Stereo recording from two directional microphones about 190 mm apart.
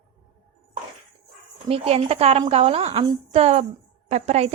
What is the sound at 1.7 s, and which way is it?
Speech, 30° right (ahead or behind).